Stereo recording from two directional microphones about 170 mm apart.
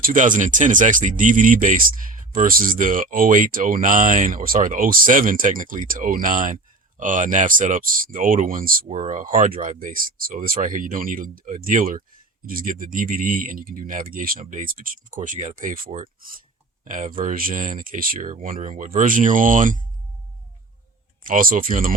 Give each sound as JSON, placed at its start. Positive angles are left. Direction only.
{"t": 0.0, "sound": "speech", "side_deg": -50}
{"t": 21.2, "sound": "speech", "side_deg": -55}